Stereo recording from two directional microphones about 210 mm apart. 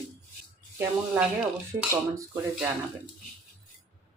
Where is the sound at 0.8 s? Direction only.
5° right (ahead or behind).